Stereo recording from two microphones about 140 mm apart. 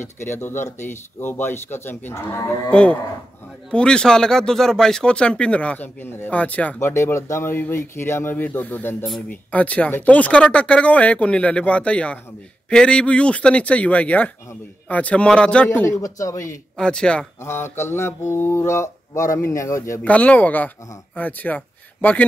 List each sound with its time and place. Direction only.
0.0 s speech: 15° left (ahead or behind)
16.7 s speech: 5° left (ahead or behind)
17.4 s mantra: 15° left (ahead or behind)
20.0 s speech: 10° left (ahead or behind)